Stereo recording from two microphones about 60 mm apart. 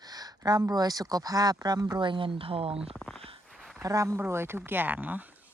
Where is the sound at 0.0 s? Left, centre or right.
Right.